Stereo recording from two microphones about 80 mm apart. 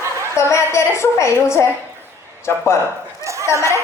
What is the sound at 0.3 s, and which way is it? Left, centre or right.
A woman's voice, left.